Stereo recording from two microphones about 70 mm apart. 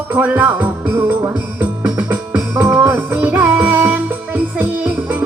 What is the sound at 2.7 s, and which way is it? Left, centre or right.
Music, right.